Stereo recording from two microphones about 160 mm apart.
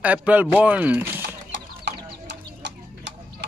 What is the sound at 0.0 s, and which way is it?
A man's voice, 10° right (ahead or behind).